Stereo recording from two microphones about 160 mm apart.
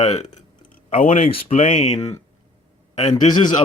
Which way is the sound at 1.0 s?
55° left (ahead or behind).